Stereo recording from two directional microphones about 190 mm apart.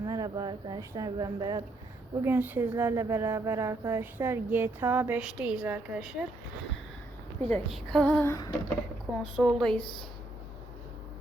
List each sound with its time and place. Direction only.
0.0 s a woman's voice: 20° right (ahead or behind); by 6.2 s 5° right (ahead or behind)
7.4 s a woman's voice: 5° left (ahead or behind)
9.3 s speech: centre (ahead or behind)